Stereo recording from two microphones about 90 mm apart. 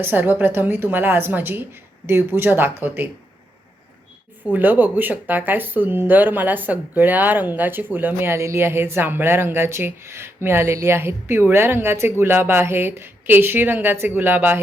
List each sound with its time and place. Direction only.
0.0 s speech: 20° right (ahead or behind)
4.5 s speech: 20° right (ahead or behind)